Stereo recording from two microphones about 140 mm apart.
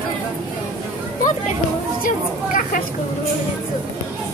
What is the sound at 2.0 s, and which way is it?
Speech, 75° left (ahead or behind).